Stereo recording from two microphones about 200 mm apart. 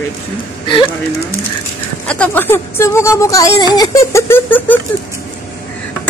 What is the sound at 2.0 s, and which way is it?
Speech, 5° left (ahead or behind).